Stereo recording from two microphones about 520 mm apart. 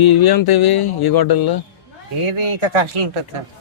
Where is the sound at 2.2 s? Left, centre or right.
Right.